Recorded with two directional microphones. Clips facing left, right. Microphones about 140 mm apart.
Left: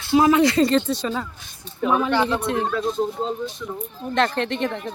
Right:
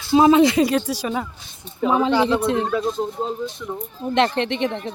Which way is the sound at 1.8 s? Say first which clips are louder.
Right 2 dB; 20° right (ahead or behind).